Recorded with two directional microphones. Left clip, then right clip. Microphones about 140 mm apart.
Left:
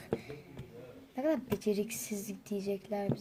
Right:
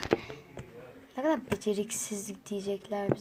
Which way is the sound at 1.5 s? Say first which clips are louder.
Right 2 dB; 15° left (ahead or behind).